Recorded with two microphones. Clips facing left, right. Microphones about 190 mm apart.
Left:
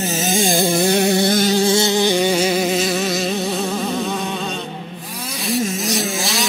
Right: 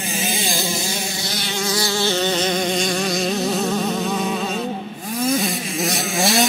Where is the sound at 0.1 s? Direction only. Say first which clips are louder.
Left 5 dB; 45° left (ahead or behind).